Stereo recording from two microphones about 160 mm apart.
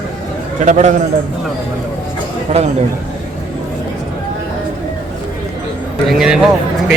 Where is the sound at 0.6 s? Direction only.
50° right (ahead or behind).